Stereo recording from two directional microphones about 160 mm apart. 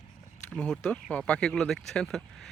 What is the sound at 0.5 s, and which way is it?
Speech, 5° left (ahead or behind).